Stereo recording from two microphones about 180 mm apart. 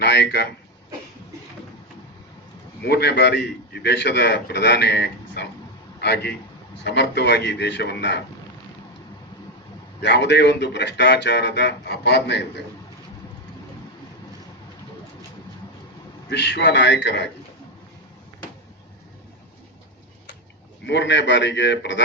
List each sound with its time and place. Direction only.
0.0 s a man's voice: 65° left (ahead or behind)
2.8 s a man's voice: 65° left (ahead or behind)
10.0 s a man's voice: 75° left (ahead or behind)
16.3 s a man's voice: 70° left (ahead or behind)
20.8 s a man's voice: 80° left